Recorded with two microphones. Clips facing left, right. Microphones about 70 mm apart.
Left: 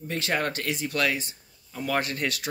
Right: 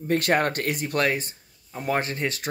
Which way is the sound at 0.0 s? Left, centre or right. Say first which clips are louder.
Right 6 dB; right.